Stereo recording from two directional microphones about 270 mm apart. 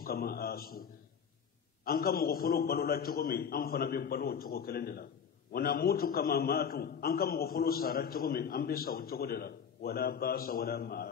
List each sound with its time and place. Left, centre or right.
0.0 s a man's voice: left
1.9 s a man's voice: left